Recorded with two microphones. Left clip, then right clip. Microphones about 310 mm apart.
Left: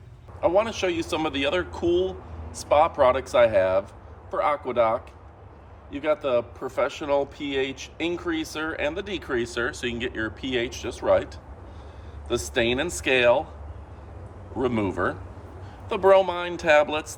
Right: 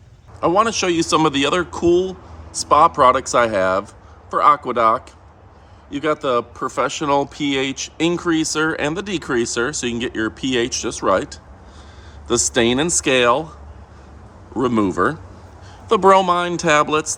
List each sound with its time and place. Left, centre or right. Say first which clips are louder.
0.4 s speech: right 6 dB; right
14.6 s speech: right 7 dB; right